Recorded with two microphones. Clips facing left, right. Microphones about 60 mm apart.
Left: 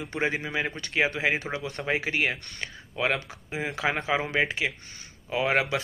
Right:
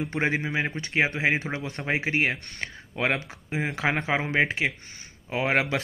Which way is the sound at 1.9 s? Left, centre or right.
Right.